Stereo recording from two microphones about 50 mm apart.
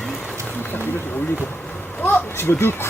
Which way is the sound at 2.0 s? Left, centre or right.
Left.